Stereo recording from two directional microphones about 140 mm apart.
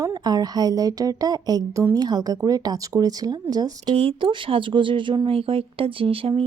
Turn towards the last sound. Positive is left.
turn(degrees=-40)  # may be behind; listen again after turning